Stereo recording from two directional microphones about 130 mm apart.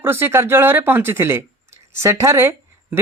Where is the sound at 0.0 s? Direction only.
20° right (ahead or behind).